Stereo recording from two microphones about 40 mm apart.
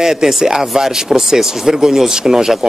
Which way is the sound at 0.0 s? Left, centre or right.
Centre.